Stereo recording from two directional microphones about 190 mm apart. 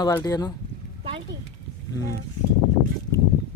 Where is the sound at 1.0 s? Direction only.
30° right (ahead or behind).